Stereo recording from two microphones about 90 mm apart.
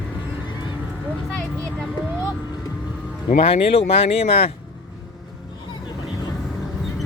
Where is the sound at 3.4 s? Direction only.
90° left.